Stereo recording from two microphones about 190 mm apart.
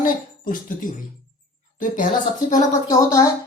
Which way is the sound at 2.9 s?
20° left (ahead or behind).